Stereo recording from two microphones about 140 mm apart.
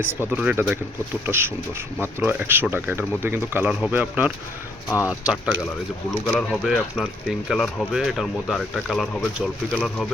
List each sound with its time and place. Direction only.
0.0 s speech: 10° right (ahead or behind)
6.1 s speech: 5° left (ahead or behind)